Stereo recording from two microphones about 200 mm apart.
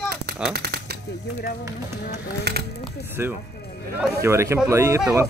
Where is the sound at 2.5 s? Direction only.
55° right (ahead or behind).